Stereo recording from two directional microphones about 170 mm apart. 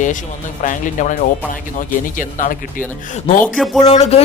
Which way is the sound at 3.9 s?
35° left (ahead or behind).